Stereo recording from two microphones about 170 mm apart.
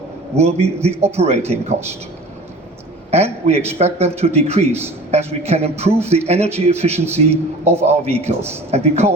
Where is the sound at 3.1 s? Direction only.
40° right (ahead or behind).